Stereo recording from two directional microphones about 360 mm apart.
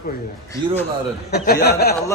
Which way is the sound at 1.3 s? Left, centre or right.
Left.